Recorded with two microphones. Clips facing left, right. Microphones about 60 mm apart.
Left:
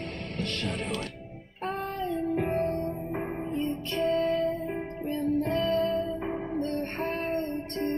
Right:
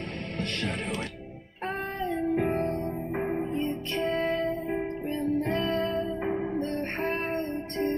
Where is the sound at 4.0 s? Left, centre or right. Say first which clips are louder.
Left 2 dB; right.